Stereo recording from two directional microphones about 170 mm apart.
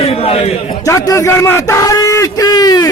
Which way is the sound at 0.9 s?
20° left (ahead or behind).